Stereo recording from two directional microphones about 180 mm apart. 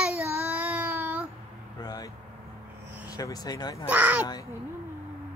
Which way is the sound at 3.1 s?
20° left (ahead or behind).